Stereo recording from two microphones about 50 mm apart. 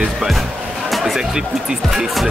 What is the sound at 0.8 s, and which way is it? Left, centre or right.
Speech, centre.